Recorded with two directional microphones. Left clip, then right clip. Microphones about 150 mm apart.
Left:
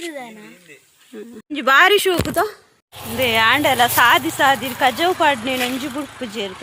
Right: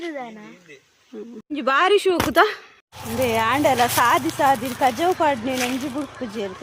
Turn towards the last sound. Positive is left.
turn(degrees=10)  # may be behind; listen again after turning